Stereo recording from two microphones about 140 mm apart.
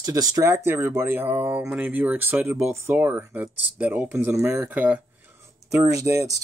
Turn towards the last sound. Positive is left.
turn(degrees=-20)  # may be behind; listen again after turning